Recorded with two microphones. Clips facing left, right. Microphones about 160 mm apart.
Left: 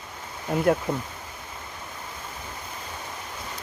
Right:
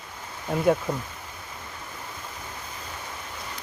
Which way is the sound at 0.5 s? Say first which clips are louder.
Even; centre (ahead or behind).